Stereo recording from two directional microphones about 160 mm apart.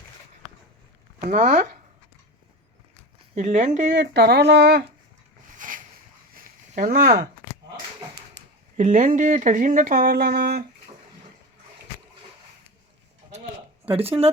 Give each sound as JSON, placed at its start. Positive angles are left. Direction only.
{"t": 1.2, "sound": "speech", "side_deg": -50}
{"t": 3.3, "sound": "speech", "side_deg": -50}
{"t": 3.9, "sound": "speech", "side_deg": -90}
{"t": 5.5, "sound": "a sound", "side_deg": -55}
{"t": 8.4, "sound": "a sound", "side_deg": -90}
{"t": 8.8, "sound": "speech", "side_deg": -50}